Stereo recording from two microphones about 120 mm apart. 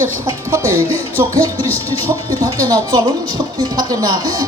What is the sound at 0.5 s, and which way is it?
Speech, 25° right (ahead or behind).